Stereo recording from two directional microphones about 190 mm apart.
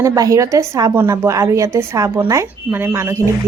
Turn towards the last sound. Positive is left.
turn(degrees=-15)  # may be behind; listen again after turning